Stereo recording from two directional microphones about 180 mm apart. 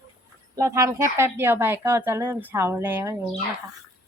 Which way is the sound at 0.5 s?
15° right (ahead or behind).